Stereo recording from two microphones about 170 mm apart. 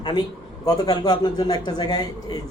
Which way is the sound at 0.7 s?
25° left (ahead or behind).